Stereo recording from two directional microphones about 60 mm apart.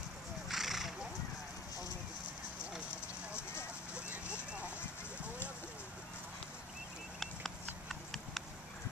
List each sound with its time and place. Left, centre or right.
0.5 s horse: centre
3.9 s vehicle: centre
7.2 s clip-clop: centre